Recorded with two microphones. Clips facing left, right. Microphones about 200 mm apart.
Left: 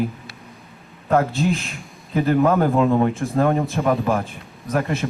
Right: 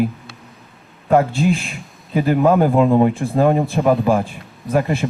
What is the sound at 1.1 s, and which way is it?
Speech, 15° right (ahead or behind).